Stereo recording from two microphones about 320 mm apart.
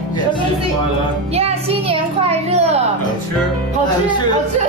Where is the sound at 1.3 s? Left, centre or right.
Centre.